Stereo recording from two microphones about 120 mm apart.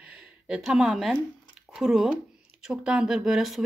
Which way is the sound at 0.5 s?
5° right (ahead or behind).